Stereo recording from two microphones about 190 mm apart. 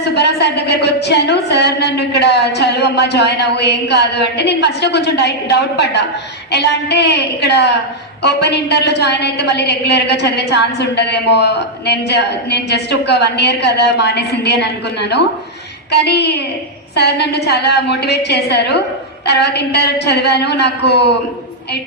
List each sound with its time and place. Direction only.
0.0 s a woman's voice: 60° left (ahead or behind)